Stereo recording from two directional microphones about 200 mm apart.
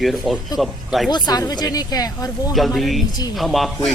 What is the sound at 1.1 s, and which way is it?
Speech, 20° left (ahead or behind).